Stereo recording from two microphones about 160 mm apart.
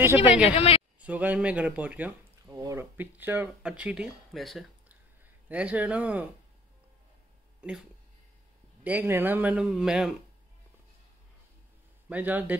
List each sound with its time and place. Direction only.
0.0 s speech: 15° right (ahead or behind)
0.5 s a woman's voice: 35° left (ahead or behind)
0.9 s speech: 10° right (ahead or behind)
2.5 s speech: 20° right (ahead or behind)
7.6 s speech: 5° right (ahead or behind)
8.8 s speech: 10° right (ahead or behind)
12.1 s speech: 10° right (ahead or behind)